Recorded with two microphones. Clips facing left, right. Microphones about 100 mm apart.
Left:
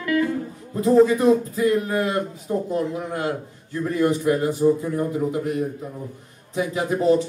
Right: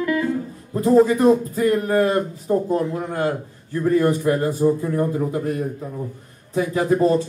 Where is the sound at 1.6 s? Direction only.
45° right (ahead or behind).